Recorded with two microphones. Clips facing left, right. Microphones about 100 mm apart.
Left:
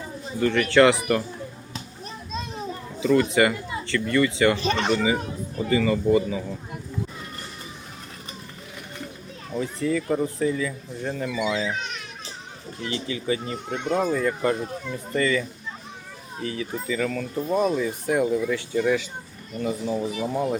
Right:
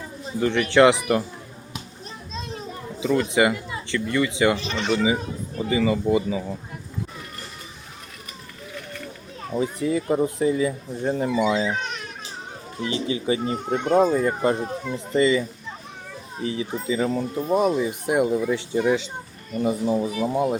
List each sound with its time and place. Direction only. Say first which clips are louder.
0.3 s speech: right 1 dB; 20° right (ahead or behind)
3.0 s speech: left 1 dB; 15° right (ahead or behind)
4.6 s speech: left 2 dB; 50° left (ahead or behind)
5.5 s speech: even; 15° right (ahead or behind)
9.5 s speech: right 2 dB; 20° right (ahead or behind)
12.8 s speech: right 4 dB; 20° right (ahead or behind)
13.5 s speech: right 5 dB; 40° right (ahead or behind)
14.0 s speech: right 3 dB; 25° right (ahead or behind)
20.2 s speech: right 2 dB; 15° right (ahead or behind)